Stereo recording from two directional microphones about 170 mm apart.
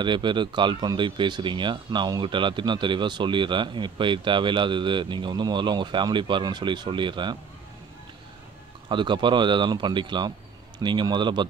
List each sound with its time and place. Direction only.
0.0 s speech: 25° right (ahead or behind)
8.8 s speech: 25° right (ahead or behind)